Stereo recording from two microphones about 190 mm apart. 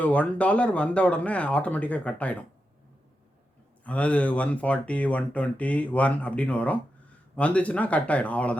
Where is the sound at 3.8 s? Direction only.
5° left (ahead or behind).